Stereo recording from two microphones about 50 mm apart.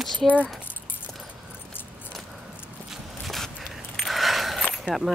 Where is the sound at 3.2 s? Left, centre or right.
Centre.